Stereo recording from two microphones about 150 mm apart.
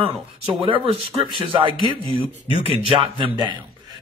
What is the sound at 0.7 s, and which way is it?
Speech, 35° right (ahead or behind).